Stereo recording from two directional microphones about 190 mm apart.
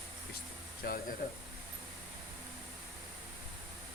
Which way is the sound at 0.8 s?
55° left (ahead or behind).